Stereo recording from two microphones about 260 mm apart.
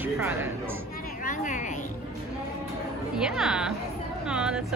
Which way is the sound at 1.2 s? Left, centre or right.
Left.